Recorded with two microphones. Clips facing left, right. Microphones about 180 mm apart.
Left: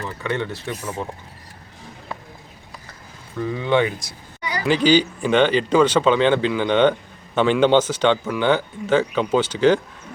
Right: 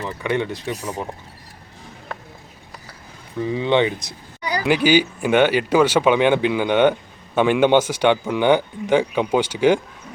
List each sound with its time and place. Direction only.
0.0 s speech: 15° right (ahead or behind)
3.4 s speech: 20° right (ahead or behind)
4.6 s speech: 10° right (ahead or behind)